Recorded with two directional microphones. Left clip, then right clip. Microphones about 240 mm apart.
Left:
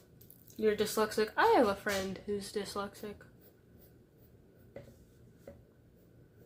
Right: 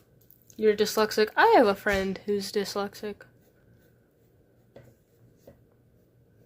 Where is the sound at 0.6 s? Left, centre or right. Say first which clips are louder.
Right 7 dB; right.